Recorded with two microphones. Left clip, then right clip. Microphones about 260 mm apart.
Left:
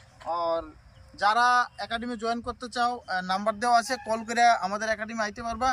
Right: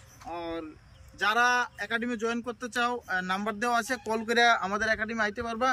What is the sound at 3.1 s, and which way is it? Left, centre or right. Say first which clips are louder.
Speech: left 3 dB; centre.